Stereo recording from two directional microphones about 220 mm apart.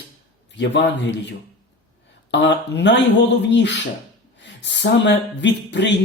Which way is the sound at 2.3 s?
55° left (ahead or behind).